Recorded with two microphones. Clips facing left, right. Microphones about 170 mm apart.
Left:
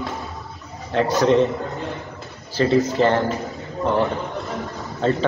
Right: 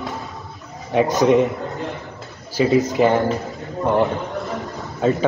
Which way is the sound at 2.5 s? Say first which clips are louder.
Right 1 dB; 15° right (ahead or behind).